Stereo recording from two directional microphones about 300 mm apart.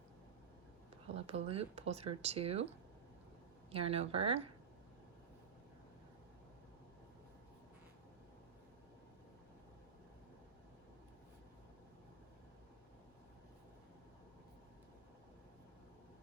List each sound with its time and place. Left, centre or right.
1.0 s speech: centre
3.7 s speech: centre